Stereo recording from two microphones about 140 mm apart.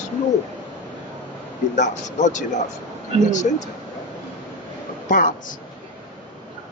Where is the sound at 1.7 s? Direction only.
60° left (ahead or behind).